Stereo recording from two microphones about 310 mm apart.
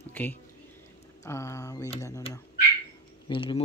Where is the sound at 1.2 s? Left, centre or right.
Centre.